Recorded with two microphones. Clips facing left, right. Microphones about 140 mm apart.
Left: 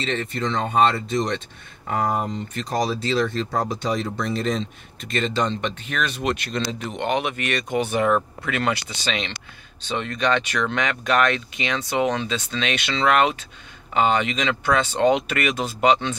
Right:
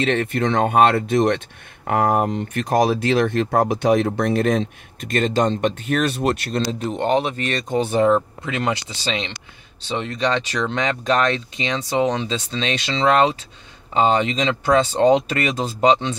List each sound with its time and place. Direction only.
0.0 s speech: 60° right (ahead or behind); by 16.2 s 30° right (ahead or behind)